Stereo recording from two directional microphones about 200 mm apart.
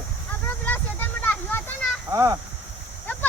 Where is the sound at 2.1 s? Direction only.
15° right (ahead or behind).